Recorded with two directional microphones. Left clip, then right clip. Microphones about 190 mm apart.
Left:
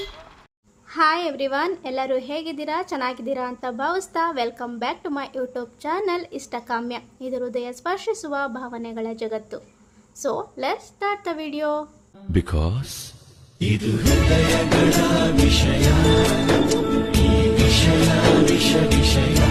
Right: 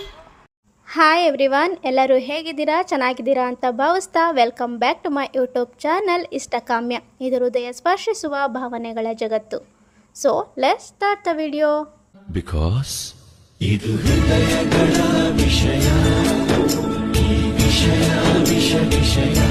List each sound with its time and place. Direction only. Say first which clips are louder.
0.9 s a woman's voice: right 5 dB; 40° right (ahead or behind)
12.3 s music: left 1 dB; centre (ahead or behind)